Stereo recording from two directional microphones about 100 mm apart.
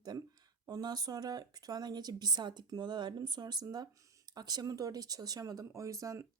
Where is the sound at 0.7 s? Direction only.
40° right (ahead or behind).